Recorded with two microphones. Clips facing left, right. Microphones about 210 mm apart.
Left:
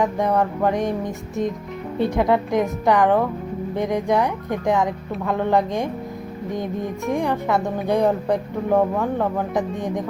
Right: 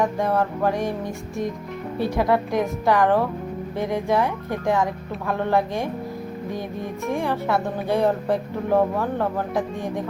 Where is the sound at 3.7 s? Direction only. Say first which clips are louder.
Left 2 dB; 15° left (ahead or behind).